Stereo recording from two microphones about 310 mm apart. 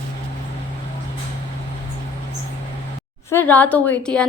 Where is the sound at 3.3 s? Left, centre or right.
Centre.